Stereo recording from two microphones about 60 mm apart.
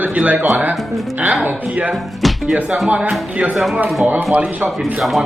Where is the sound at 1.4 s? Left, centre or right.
Right.